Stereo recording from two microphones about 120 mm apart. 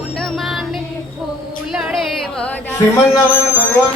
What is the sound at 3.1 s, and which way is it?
Speech, 15° left (ahead or behind).